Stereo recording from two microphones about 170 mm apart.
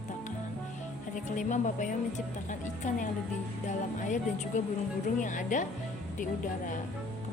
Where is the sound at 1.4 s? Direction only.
50° left (ahead or behind).